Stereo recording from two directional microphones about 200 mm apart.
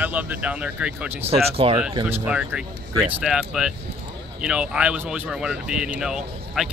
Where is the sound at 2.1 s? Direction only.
5° right (ahead or behind).